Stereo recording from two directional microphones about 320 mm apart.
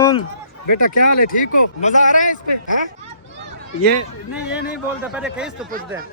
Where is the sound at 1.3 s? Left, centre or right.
Left.